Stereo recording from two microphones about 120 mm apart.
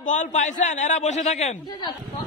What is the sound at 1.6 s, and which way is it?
Speech, 35° left (ahead or behind).